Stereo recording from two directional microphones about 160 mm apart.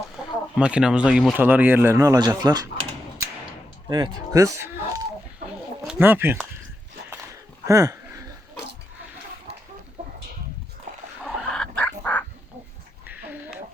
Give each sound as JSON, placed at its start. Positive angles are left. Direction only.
{"t": 0.5, "sound": "speech", "side_deg": -5}
{"t": 3.8, "sound": "speech", "side_deg": -25}
{"t": 7.7, "sound": "a sound", "side_deg": -20}
{"t": 9.5, "sound": "chicken", "side_deg": -40}
{"t": 11.2, "sound": "fowl", "side_deg": 5}